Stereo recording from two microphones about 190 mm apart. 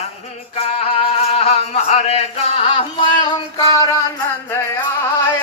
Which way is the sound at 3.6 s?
15° left (ahead or behind).